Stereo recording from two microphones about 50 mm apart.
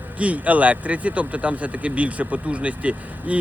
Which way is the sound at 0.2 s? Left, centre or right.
Right.